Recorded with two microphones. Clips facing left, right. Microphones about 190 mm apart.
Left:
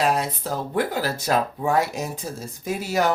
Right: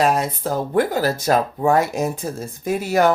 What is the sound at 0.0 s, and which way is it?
Speech, 45° right (ahead or behind).